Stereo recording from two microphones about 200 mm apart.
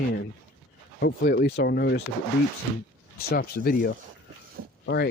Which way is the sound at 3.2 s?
50° left (ahead or behind).